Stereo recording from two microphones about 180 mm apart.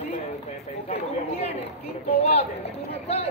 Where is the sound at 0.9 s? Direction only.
35° left (ahead or behind).